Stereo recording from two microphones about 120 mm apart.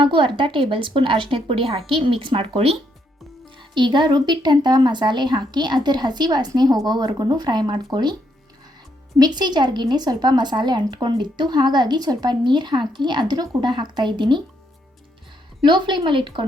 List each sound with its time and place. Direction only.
0.0 s a woman's voice: 45° right (ahead or behind)
9.1 s a woman's voice: 35° right (ahead or behind)
15.6 s speech: 40° right (ahead or behind)